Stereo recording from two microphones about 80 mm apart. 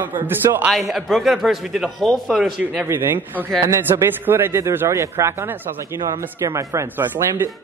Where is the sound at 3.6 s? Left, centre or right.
Right.